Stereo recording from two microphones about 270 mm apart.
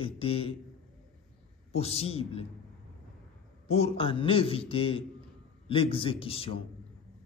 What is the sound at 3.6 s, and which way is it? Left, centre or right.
A man's voice, left.